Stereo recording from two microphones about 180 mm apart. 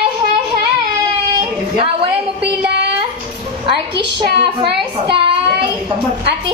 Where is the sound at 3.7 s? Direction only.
30° right (ahead or behind).